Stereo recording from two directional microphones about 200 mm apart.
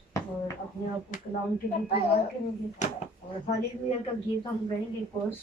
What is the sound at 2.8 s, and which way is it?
Speech, 40° left (ahead or behind).